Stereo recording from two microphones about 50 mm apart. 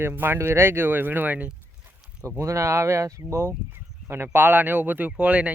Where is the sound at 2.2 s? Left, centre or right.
Right.